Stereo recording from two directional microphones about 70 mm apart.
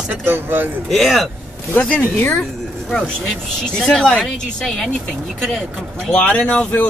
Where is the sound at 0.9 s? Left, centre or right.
Centre.